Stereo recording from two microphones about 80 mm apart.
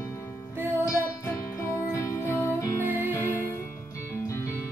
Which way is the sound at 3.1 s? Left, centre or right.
Left.